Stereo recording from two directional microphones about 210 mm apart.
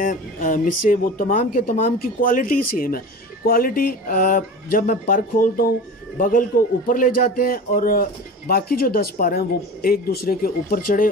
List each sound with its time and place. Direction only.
0.0 s a man's voice: 40° left (ahead or behind)